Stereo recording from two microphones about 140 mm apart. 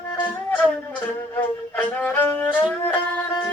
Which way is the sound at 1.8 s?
10° left (ahead or behind).